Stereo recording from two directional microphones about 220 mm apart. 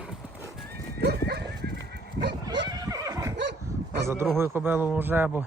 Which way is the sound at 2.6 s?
15° right (ahead or behind).